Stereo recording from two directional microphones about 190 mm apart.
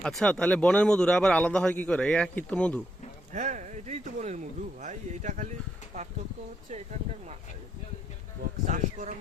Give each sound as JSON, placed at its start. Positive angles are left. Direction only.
{"t": 0.0, "sound": "a man's voice", "side_deg": 5}
{"t": 3.3, "sound": "speech", "side_deg": -40}
{"t": 6.7, "sound": "speech", "side_deg": -35}
{"t": 8.6, "sound": "speech", "side_deg": -40}